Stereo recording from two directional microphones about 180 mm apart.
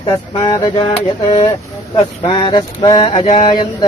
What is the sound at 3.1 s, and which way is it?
Speech, 40° left (ahead or behind).